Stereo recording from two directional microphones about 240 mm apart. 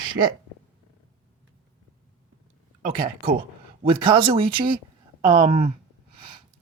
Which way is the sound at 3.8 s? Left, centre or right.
Right.